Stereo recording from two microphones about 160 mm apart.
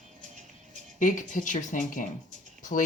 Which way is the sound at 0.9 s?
55° left (ahead or behind).